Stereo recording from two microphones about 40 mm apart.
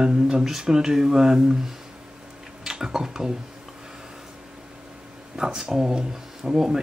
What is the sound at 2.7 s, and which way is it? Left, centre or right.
Speech, centre.